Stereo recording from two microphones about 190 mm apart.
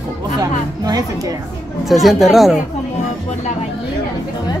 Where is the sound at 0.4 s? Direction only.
20° right (ahead or behind).